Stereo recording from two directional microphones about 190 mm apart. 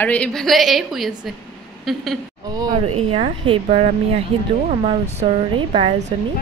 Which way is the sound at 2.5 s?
25° right (ahead or behind).